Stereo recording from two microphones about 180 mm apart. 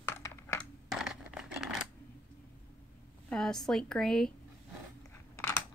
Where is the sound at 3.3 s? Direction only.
5° left (ahead or behind).